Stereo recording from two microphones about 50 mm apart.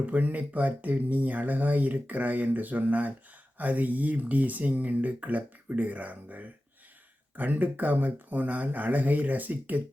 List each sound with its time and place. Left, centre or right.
0.0 s speech: right